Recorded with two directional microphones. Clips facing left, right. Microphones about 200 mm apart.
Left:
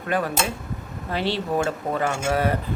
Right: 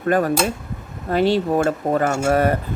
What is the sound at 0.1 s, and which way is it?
Speech, 45° right (ahead or behind).